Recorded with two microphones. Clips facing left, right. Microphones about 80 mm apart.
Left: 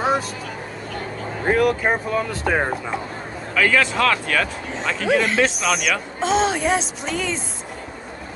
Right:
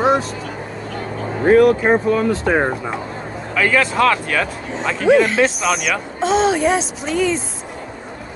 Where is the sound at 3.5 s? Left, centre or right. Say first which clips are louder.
Right 2 dB; right.